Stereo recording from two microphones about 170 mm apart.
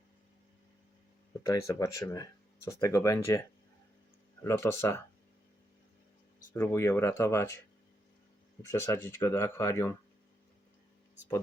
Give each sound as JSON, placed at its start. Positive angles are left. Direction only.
{"t": 1.5, "sound": "speech", "side_deg": 20}
{"t": 4.4, "sound": "speech", "side_deg": 15}
{"t": 6.5, "sound": "speech", "side_deg": 15}
{"t": 8.6, "sound": "speech", "side_deg": 15}